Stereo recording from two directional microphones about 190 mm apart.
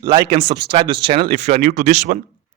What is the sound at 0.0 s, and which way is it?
Speech, 20° right (ahead or behind).